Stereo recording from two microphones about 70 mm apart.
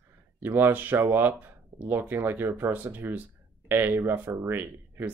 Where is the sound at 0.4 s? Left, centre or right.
Right.